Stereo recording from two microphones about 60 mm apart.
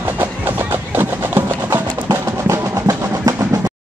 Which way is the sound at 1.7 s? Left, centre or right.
Right.